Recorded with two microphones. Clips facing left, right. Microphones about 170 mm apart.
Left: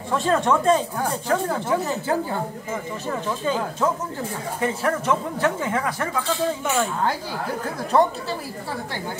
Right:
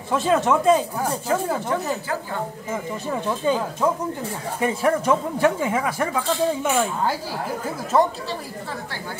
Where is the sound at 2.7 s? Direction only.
10° right (ahead or behind).